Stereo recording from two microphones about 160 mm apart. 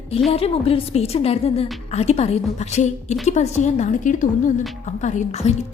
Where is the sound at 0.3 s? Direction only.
40° left (ahead or behind).